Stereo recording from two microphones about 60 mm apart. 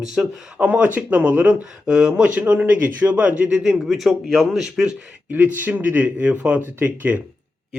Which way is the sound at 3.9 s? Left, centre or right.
Centre.